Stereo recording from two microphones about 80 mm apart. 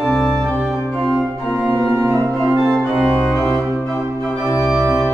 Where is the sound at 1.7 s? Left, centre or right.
Right.